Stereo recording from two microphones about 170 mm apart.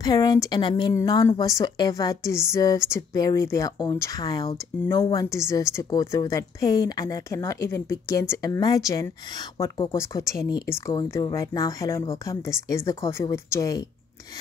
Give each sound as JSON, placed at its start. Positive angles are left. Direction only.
{"t": 0.0, "sound": "speech", "side_deg": 20}